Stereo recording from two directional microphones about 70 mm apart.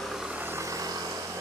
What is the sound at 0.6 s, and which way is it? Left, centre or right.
Vehicle, right.